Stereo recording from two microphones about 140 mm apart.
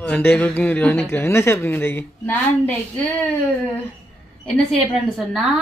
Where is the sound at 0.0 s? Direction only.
15° left (ahead or behind).